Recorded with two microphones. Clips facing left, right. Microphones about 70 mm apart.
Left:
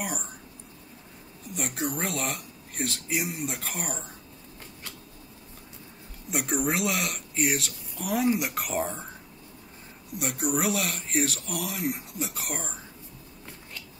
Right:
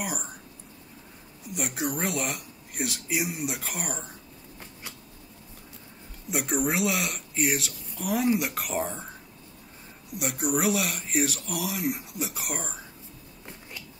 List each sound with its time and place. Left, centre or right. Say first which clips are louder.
0.0 s speech: even; centre
1.5 s speech: right 1 dB; centre
6.3 s speech: right 1 dB; centre
10.1 s speech: right 1 dB; centre